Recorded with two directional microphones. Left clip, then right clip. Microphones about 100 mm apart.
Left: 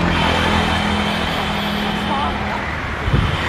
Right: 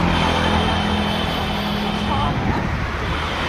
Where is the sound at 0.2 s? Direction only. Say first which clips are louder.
Left 2 dB; 90° left; by 1.2 s 45° left (ahead or behind).